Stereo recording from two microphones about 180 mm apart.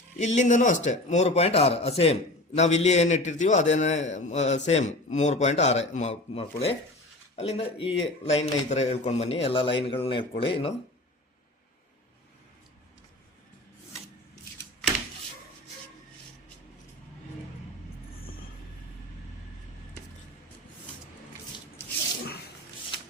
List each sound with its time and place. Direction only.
0.2 s a man's voice: 40° left (ahead or behind)